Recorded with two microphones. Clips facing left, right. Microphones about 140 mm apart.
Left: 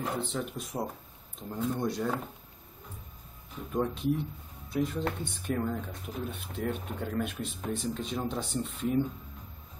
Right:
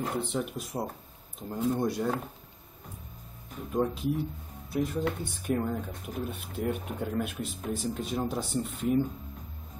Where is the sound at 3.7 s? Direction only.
5° right (ahead or behind).